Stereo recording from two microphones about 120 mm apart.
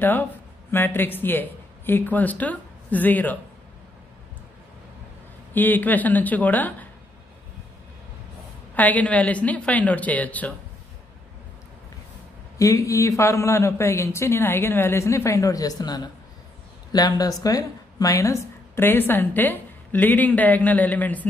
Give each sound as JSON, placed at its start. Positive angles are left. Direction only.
{"t": 0.7, "sound": "speech", "side_deg": 15}
{"t": 5.5, "sound": "a woman's voice", "side_deg": 15}
{"t": 8.7, "sound": "a woman's voice", "side_deg": 15}
{"t": 12.5, "sound": "a man's voice", "side_deg": 25}